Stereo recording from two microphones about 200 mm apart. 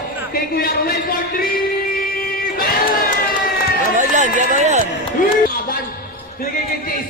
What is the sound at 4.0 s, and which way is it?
Speech, 40° right (ahead or behind).